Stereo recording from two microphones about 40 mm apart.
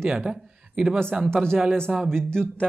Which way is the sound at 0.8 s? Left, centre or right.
Right.